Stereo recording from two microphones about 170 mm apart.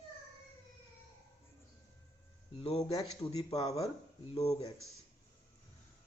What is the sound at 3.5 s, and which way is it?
Speech, 20° left (ahead or behind).